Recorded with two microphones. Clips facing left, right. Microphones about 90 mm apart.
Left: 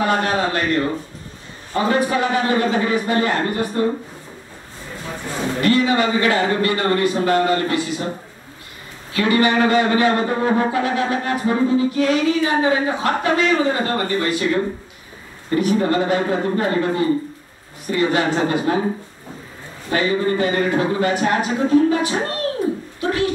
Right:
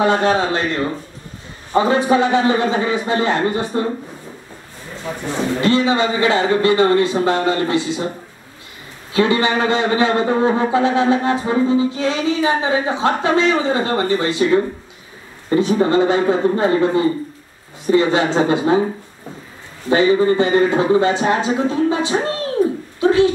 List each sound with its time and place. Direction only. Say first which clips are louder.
0.0 s a man's voice: right 3 dB; 25° right (ahead or behind)
5.6 s a man's voice: even; 25° right (ahead or behind)
9.1 s a man's voice: right 1 dB; 25° right (ahead or behind)
19.9 s a man's voice: right 5 dB; 25° right (ahead or behind)